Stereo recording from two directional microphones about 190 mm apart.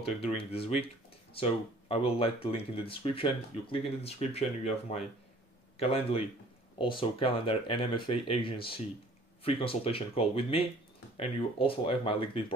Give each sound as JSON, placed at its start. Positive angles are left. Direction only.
{"t": 0.0, "sound": "speech", "side_deg": 30}